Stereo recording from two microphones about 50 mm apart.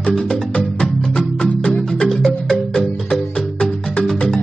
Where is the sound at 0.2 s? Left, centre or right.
Centre.